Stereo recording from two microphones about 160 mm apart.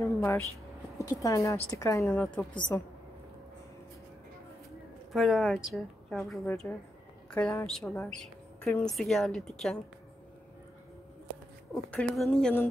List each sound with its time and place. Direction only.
0.0 s a sound: 15° left (ahead or behind)
0.9 s speech: 20° left (ahead or behind)
5.1 s a woman's voice: centre (ahead or behind)
11.7 s speech: 10° left (ahead or behind)